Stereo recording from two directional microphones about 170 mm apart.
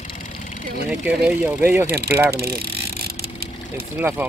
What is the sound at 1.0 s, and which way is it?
Speech, 10° right (ahead or behind).